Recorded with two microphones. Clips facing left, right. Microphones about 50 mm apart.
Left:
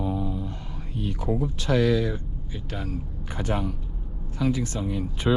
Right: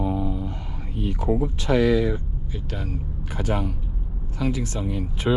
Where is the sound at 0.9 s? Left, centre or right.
Right.